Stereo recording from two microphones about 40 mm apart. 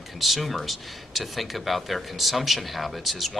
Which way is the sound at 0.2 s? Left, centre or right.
Centre.